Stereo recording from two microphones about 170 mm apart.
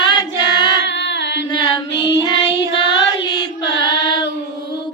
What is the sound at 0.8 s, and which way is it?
Carnatic music, 90° left.